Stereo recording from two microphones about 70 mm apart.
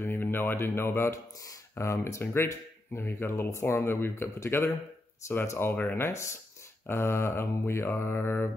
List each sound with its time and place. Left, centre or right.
0.0 s speech: left